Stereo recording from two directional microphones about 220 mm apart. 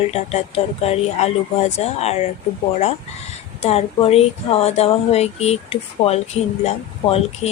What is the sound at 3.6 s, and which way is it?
Speech, 30° left (ahead or behind).